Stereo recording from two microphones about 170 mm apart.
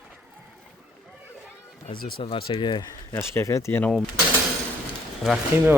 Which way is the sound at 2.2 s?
35° left (ahead or behind).